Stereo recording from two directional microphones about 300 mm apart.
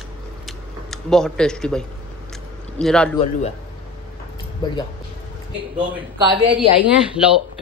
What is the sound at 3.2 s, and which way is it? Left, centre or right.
Speech, left.